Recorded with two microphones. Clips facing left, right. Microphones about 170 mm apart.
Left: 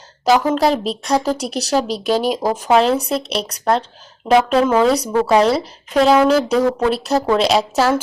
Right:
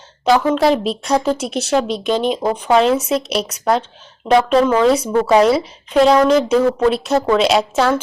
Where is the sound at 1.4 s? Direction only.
35° left (ahead or behind).